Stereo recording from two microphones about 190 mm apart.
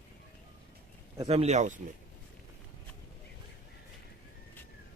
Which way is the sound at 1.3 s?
35° right (ahead or behind).